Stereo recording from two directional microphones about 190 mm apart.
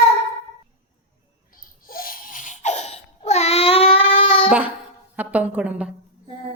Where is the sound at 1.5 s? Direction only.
50° left (ahead or behind); by 4.5 s 25° left (ahead or behind).